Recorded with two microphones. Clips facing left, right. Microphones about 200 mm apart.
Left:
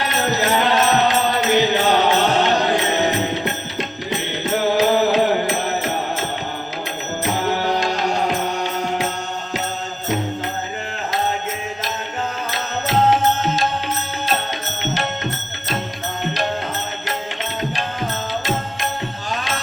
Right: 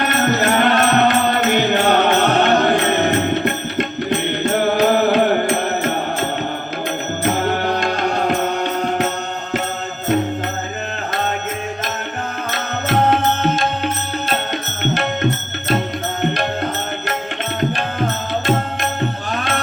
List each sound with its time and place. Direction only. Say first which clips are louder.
0.0 s music: right 3 dB; 55° right (ahead or behind)
12.5 s music: right 2 dB; 60° right (ahead or behind)
16.2 s music: right 4 dB; 55° right (ahead or behind)
19.3 s music: right 4 dB; 55° right (ahead or behind)